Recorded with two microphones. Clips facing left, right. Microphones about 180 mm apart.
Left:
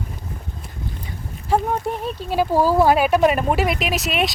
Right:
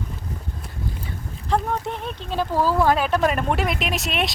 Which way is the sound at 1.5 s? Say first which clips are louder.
Left 3 dB; 5° left (ahead or behind).